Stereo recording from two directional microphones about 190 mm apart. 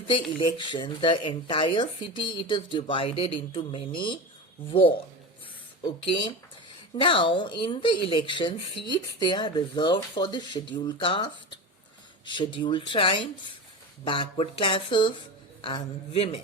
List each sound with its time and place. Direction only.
0.1 s speech: 25° left (ahead or behind)
5.8 s a man's voice: 25° left (ahead or behind)